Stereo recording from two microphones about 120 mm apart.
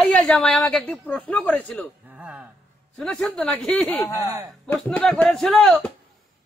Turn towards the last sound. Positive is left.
turn(degrees=5)  # may be behind; listen again after turning